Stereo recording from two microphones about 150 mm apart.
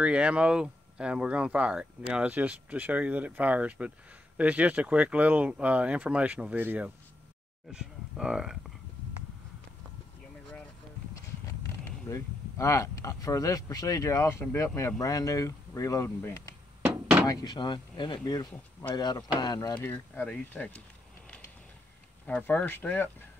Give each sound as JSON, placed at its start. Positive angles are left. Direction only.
{"t": 0.0, "sound": "speech", "side_deg": -5}
{"t": 12.1, "sound": "speech", "side_deg": 20}
{"t": 19.8, "sound": "speech", "side_deg": 10}
{"t": 22.2, "sound": "speech", "side_deg": 10}